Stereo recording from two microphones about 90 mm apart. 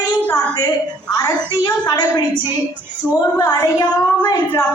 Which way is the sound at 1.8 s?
50° left (ahead or behind).